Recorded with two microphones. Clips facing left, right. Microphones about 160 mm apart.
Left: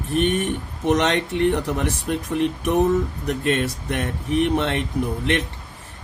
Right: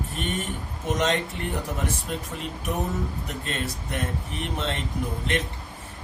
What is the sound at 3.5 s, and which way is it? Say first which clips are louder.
Speech: left 10 dB; 70° left (ahead or behind).